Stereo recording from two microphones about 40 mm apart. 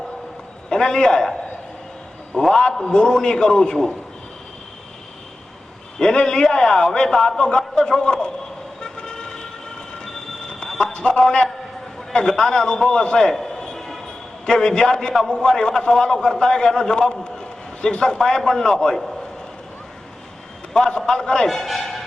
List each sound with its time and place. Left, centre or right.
0.7 s a man's voice: centre
2.5 s a man's voice: centre
6.0 s a man's voice: centre
8.8 s vehicle: centre
10.0 s train: centre
10.9 s a man's voice: left
12.9 s a sound: left
14.4 s a man's voice: centre
20.7 s a man's voice: left
21.4 s speech: centre